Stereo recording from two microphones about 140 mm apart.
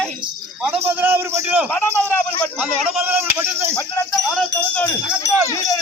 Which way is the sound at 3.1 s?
10° right (ahead or behind).